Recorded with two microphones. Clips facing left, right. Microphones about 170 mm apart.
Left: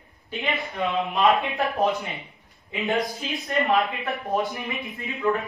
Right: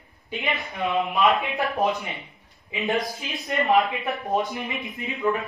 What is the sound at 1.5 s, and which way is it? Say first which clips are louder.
Speech: even; 20° right (ahead or behind).